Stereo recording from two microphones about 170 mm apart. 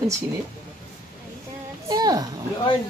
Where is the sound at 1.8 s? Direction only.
25° right (ahead or behind).